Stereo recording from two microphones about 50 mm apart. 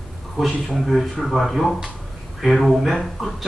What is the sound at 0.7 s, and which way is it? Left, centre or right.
Speech, centre.